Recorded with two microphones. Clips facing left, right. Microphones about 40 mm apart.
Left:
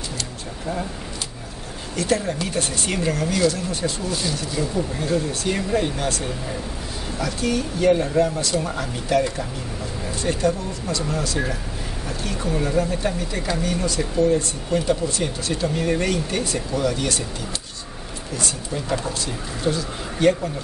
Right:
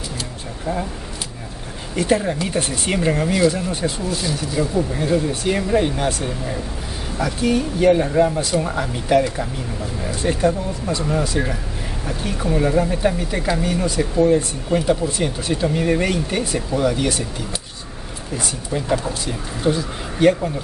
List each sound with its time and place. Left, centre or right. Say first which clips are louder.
2.0 s speech: right 4 dB; centre
4.1 s speech: right 2 dB; centre
4.6 s speech: right 5 dB; centre